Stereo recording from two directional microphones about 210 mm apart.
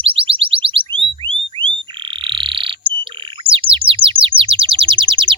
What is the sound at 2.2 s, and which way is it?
Frog, 25° right (ahead or behind).